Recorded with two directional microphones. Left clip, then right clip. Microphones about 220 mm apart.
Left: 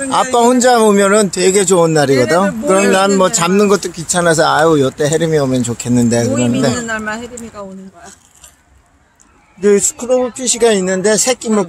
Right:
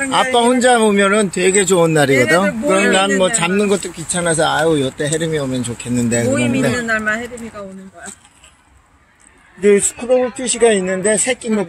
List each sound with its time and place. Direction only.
0.1 s speech: 20° left (ahead or behind)
2.9 s speech: 25° left (ahead or behind)
6.0 s speech: 15° left (ahead or behind)
9.6 s speech: 5° left (ahead or behind); by 11.6 s 20° left (ahead or behind)